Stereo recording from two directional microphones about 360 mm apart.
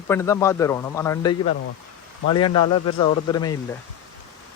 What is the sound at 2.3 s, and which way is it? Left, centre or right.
A man's voice, centre.